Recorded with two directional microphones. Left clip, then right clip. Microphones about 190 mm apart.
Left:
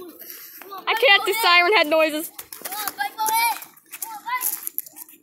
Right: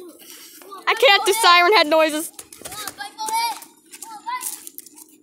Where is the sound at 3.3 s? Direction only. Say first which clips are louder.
Right 2 dB; 20° left (ahead or behind).